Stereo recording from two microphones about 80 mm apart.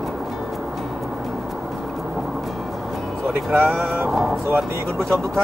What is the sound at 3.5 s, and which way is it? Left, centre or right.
Speech, right.